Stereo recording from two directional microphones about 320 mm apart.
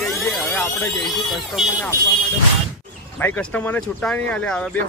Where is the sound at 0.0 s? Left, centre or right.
Centre.